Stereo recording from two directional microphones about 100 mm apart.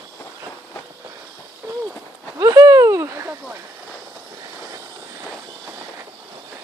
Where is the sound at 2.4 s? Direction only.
35° right (ahead or behind).